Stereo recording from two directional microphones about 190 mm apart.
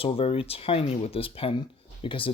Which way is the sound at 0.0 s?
30° left (ahead or behind).